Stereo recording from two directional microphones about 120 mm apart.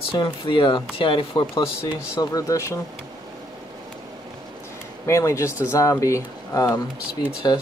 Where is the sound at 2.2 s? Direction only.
30° left (ahead or behind).